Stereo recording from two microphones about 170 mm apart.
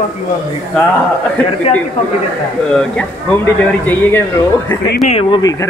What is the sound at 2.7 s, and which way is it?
Speech, 5° left (ahead or behind).